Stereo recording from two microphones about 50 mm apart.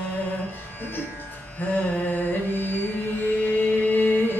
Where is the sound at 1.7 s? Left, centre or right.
Left.